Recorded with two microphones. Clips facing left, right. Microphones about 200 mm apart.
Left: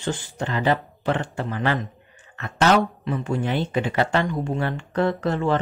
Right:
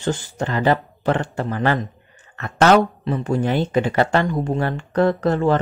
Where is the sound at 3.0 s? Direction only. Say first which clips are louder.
Right 4 dB; 35° right (ahead or behind).